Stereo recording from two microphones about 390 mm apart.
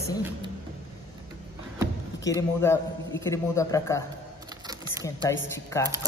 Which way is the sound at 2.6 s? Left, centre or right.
Centre.